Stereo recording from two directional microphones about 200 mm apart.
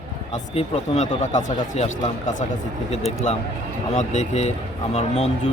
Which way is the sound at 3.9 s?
35° left (ahead or behind).